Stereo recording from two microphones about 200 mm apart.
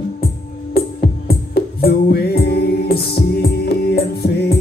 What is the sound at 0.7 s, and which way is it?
Music, 50° left (ahead or behind).